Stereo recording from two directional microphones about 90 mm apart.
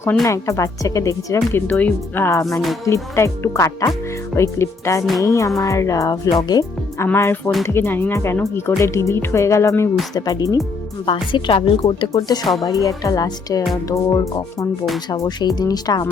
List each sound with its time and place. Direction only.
0.3 s speech: 35° left (ahead or behind)
1.8 s a woman's voice: 25° left (ahead or behind)
2.5 s music: centre (ahead or behind)
2.8 s speech: 35° left (ahead or behind)
7.0 s a woman's voice: 30° left (ahead or behind)
10.2 s speech: 45° left (ahead or behind)
11.0 s a woman's voice: 70° left (ahead or behind)
12.1 s speech: 45° left (ahead or behind)